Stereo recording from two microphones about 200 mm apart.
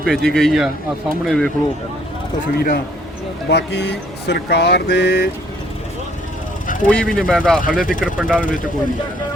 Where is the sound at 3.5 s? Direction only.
60° left (ahead or behind).